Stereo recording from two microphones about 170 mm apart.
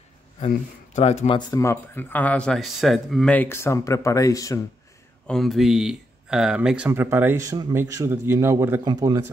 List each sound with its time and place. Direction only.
0.9 s speech: 40° left (ahead or behind)
1.5 s speech: 15° left (ahead or behind)
5.2 s a man's voice: centre (ahead or behind); by 9.2 s 25° right (ahead or behind)